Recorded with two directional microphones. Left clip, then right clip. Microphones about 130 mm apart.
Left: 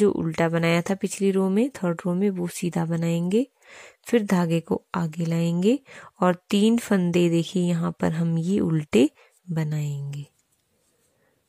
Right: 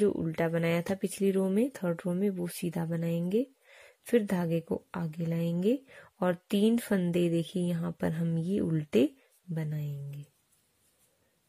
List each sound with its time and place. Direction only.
0.0 s speech: 30° left (ahead or behind)